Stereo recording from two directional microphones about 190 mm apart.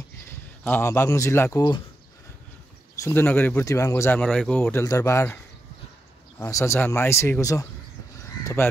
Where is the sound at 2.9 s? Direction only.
15° left (ahead or behind).